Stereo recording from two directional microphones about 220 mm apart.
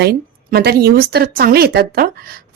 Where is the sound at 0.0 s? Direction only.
45° right (ahead or behind).